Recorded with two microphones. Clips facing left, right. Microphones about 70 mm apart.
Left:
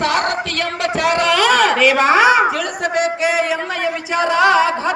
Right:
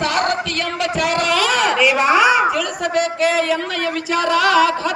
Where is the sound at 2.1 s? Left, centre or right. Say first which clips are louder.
Left 2 dB; left.